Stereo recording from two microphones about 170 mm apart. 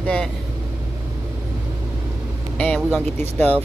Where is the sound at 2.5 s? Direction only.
5° left (ahead or behind).